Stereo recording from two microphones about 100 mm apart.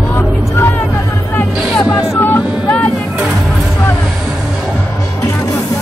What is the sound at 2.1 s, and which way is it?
Vehicle, 20° left (ahead or behind).